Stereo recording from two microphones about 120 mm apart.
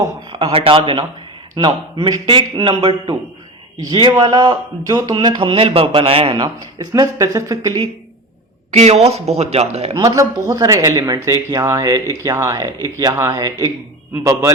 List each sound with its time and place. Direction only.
0.3 s a man's voice: 50° right (ahead or behind)
6.7 s a man's voice: 35° right (ahead or behind)
8.7 s speech: 65° right (ahead or behind)
10.0 s a man's voice: 30° right (ahead or behind)